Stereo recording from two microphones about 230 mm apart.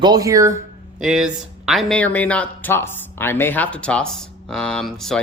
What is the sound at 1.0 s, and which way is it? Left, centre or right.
Speech, centre.